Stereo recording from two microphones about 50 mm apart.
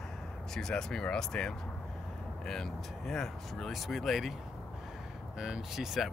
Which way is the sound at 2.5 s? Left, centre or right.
Centre.